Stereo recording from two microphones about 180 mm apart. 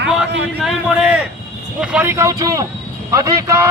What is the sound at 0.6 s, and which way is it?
A man's voice, 5° right (ahead or behind).